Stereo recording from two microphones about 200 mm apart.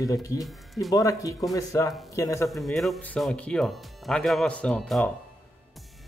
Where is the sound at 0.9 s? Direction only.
15° left (ahead or behind).